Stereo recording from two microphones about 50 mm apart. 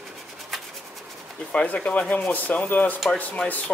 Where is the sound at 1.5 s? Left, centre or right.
Left.